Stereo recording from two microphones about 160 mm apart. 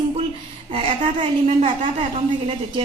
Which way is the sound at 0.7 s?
35° right (ahead or behind).